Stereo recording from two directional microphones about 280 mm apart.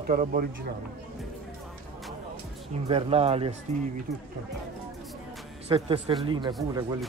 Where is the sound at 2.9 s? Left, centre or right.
Right.